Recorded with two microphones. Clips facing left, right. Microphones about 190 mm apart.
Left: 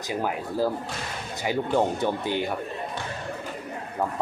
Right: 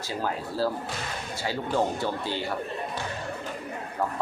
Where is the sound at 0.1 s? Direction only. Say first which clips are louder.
Left 3 dB; 15° left (ahead or behind).